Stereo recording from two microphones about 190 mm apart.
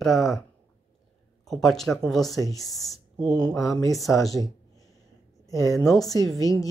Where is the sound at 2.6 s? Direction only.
Centre (ahead or behind).